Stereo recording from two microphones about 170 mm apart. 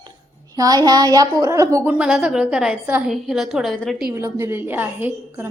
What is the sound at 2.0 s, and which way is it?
A woman's voice, 5° right (ahead or behind).